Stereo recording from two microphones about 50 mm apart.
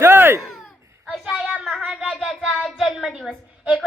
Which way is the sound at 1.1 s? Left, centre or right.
Centre.